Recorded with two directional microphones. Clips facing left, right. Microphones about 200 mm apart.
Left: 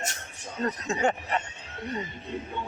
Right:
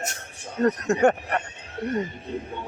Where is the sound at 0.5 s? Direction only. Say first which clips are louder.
Right 8 dB; 60° right (ahead or behind).